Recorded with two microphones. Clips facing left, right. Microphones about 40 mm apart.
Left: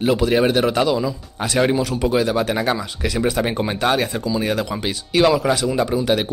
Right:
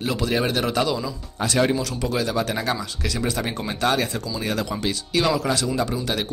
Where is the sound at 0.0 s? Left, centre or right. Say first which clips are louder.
Left 7 dB; centre.